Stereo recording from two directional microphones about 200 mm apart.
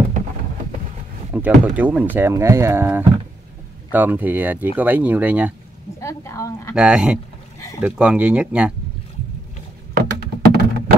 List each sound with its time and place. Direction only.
1.3 s speech: 10° right (ahead or behind)
5.9 s a woman's voice: 15° left (ahead or behind)
6.7 s speech: 5° right (ahead or behind)
9.9 s a sound: 55° right (ahead or behind)